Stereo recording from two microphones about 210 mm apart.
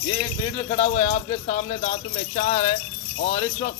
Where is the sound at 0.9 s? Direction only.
35° left (ahead or behind).